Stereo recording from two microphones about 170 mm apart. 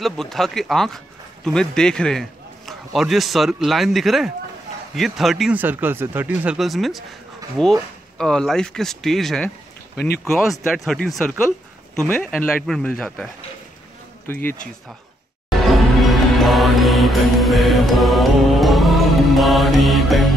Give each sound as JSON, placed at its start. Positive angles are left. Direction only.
{"t": 0.0, "sound": "speech", "side_deg": 0}
{"t": 9.9, "sound": "speech", "side_deg": 70}
{"t": 10.6, "sound": "a man's voice", "side_deg": 0}
{"t": 15.6, "sound": "music", "side_deg": 0}